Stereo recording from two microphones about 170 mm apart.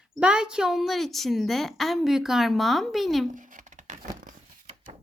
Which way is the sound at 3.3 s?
50° right (ahead or behind).